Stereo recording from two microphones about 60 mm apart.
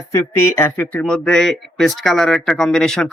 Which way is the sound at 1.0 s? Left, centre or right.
Centre.